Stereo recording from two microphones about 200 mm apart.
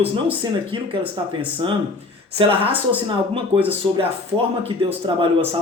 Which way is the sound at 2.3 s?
25° right (ahead or behind).